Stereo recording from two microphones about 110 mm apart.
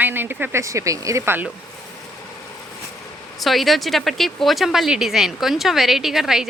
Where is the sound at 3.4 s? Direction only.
Centre (ahead or behind).